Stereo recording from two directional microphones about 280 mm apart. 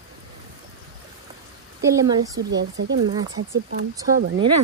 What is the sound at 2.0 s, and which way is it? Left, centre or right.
Speech, centre.